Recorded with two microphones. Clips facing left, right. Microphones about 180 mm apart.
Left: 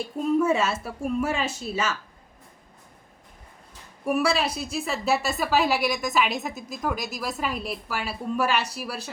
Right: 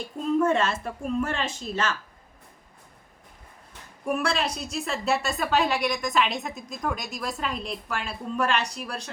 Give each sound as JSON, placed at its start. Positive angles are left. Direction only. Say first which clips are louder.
{"t": 0.0, "sound": "a woman's voice", "louder": "left 1 dB", "side_deg": 5}
{"t": 4.0, "sound": "a woman's voice", "louder": "left 3 dB", "side_deg": 5}